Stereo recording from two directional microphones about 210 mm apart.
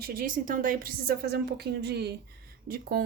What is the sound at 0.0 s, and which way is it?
Speech, 45° right (ahead or behind).